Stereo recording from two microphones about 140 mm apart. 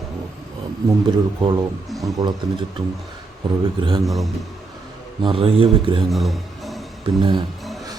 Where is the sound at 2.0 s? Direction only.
30° right (ahead or behind).